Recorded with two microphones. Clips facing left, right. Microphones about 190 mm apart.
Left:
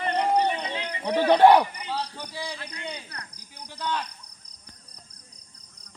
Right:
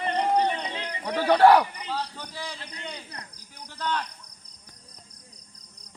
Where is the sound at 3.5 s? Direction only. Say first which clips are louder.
Even; 15° left (ahead or behind).